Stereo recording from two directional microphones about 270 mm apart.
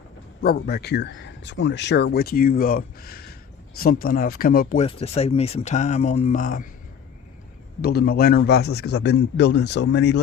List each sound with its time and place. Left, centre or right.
0.4 s speech: left
7.8 s speech: left